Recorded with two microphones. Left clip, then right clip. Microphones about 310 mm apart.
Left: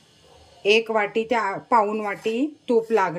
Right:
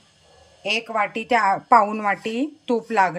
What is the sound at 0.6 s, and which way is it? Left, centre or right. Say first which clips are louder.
A woman's voice: left 3 dB; centre.